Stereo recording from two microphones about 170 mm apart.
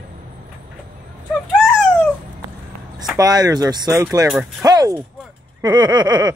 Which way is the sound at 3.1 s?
20° right (ahead or behind).